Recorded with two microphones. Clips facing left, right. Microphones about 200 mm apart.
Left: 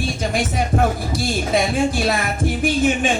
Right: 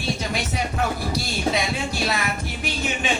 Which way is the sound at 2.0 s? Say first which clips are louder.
Left 6 dB; 50° left (ahead or behind).